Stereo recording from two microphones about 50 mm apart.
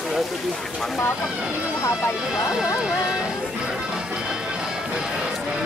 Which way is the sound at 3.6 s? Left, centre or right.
Centre.